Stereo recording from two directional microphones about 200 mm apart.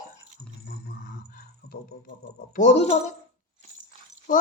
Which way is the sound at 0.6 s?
50° left (ahead or behind).